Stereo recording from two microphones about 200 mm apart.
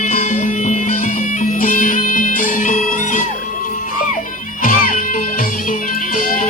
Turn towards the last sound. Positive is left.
turn(degrees=40)  # may be behind; listen again after turning